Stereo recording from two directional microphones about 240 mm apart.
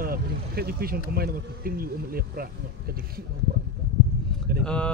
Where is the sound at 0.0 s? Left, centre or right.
Right.